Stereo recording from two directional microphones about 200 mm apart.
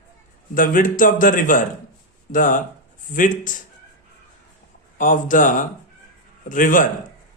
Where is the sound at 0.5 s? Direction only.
45° left (ahead or behind).